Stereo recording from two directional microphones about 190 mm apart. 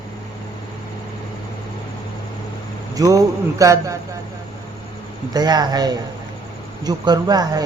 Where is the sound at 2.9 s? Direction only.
15° right (ahead or behind).